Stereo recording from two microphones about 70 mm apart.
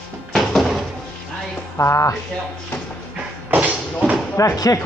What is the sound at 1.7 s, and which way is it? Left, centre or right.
Speech, left.